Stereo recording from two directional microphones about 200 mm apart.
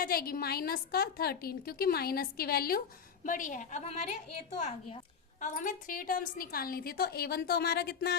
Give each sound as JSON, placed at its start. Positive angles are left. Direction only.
{"t": 0.0, "sound": "a woman's voice", "side_deg": 50}
{"t": 5.4, "sound": "a woman's voice", "side_deg": 40}